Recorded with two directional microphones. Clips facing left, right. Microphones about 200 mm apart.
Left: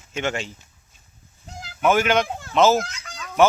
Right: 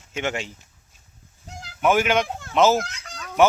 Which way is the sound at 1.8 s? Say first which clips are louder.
Left 1 dB; 15° right (ahead or behind).